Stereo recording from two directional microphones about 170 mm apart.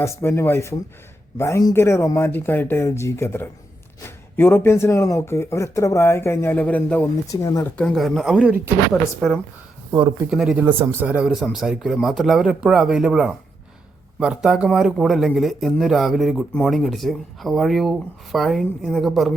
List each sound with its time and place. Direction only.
0.0 s speech: 15° left (ahead or behind)
7.3 s speech: 20° left (ahead or behind)
7.8 s speech: centre (ahead or behind)
8.9 s speech: centre (ahead or behind)